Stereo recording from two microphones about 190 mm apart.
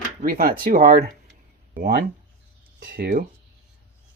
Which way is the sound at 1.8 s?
60° right (ahead or behind).